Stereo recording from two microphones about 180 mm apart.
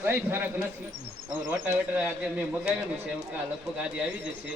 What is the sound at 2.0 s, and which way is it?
Speech, 10° right (ahead or behind).